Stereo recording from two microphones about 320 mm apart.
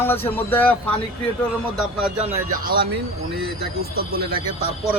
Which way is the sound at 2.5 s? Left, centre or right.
Right.